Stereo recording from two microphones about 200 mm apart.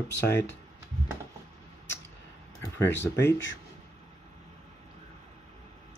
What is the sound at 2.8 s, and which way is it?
Speech, 60° left (ahead or behind).